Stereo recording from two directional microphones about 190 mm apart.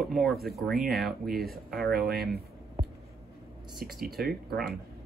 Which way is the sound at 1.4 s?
50° right (ahead or behind).